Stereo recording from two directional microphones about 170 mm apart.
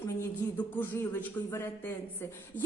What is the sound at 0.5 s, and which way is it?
A woman's voice, 10° left (ahead or behind).